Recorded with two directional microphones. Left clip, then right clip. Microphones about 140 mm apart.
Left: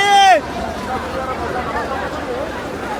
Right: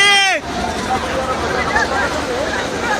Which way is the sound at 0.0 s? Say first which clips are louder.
Left 2 dB; 50° left (ahead or behind).